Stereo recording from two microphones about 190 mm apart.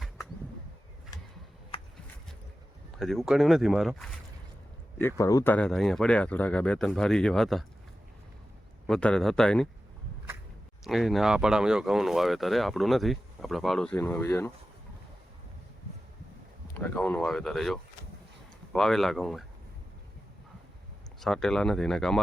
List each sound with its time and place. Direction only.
1.1 s a sound: 20° left (ahead or behind)
3.0 s speech: centre (ahead or behind)
4.9 s speech: 15° left (ahead or behind)
8.9 s speech: 5° left (ahead or behind)
10.8 s speech: centre (ahead or behind)
16.7 s speech: 10° left (ahead or behind)
21.2 s speech: centre (ahead or behind)